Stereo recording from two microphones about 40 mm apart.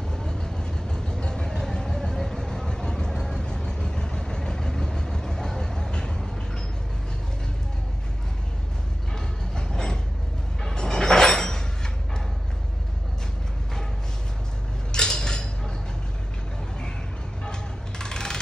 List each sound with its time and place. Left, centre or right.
0.1 s vehicle: centre
9.6 s train: centre
10.6 s sliding door: centre
14.9 s a sound: centre
17.5 s music: centre